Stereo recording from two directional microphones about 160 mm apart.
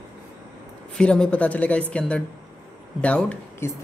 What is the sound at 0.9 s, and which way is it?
Speech, 5° left (ahead or behind).